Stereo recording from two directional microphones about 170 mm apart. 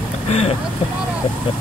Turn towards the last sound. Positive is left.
turn(degrees=35)  # may be behind; listen again after turning